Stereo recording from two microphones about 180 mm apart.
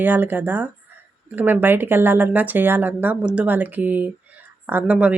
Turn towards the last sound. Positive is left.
turn(degrees=-10)  # may be behind; listen again after turning